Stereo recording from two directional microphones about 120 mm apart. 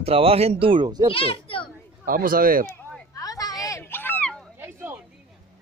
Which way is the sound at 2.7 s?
15° left (ahead or behind).